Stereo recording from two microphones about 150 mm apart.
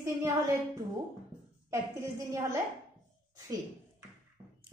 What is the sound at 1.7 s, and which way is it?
Speech, 20° right (ahead or behind).